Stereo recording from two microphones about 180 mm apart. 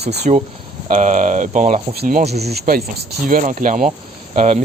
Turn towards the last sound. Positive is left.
turn(degrees=-40)  # may be behind; listen again after turning